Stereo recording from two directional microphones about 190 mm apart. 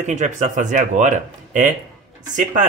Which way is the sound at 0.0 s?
40° right (ahead or behind).